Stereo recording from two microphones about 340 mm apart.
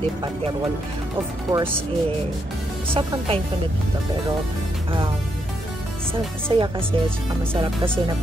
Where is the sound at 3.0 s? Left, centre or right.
Centre.